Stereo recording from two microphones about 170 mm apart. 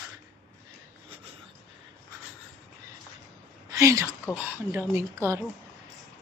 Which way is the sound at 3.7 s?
20° right (ahead or behind).